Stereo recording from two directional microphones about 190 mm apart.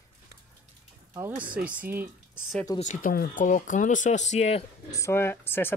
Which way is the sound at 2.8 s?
45° left (ahead or behind).